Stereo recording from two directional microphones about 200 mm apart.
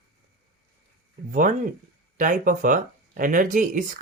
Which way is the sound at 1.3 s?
45° right (ahead or behind).